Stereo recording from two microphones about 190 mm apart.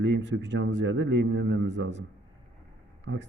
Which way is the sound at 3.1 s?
75° right (ahead or behind).